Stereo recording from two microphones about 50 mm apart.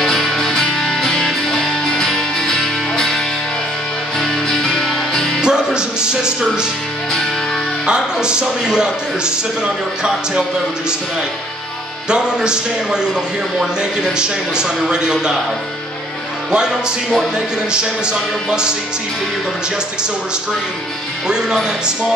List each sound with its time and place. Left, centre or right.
0.0 s music: centre
4.2 s music: centre
5.4 s speech: centre
7.8 s speech: centre
12.1 s speech: centre
16.5 s speech: centre